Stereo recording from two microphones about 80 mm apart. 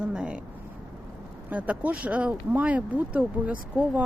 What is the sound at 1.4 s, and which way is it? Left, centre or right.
Speech, centre.